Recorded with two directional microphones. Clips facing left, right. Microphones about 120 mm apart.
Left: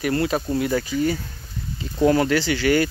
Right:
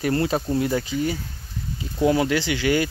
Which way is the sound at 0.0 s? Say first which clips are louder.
Even; 25° right (ahead or behind).